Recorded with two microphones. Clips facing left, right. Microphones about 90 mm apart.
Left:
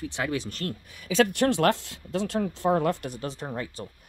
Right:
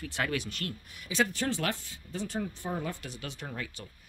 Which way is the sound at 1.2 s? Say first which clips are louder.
Left 8 dB; 70° left (ahead or behind).